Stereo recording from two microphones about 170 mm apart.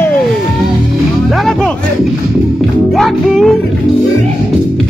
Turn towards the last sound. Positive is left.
turn(degrees=0)  # may be behind; listen again after turning